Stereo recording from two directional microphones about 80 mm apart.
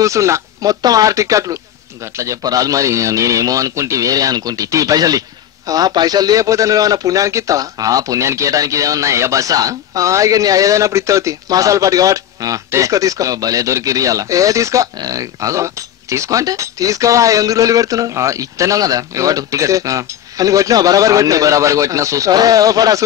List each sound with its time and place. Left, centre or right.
0.0 s a man's voice: right